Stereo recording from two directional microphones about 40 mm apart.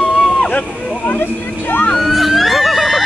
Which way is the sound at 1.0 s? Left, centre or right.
Left.